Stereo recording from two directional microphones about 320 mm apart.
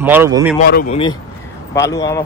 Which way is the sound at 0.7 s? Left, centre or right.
Left.